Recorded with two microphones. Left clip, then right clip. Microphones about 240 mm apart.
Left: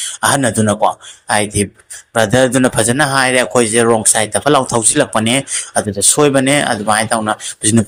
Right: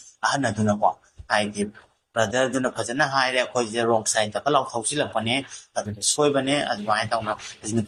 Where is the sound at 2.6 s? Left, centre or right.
Left.